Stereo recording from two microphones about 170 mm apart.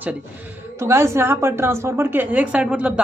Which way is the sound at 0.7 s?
15° right (ahead or behind).